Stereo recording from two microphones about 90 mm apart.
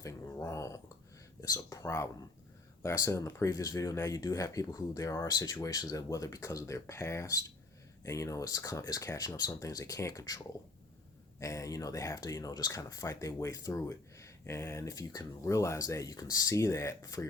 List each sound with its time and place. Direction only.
0.0 s speech: 35° left (ahead or behind)
1.8 s speech: 30° left (ahead or behind)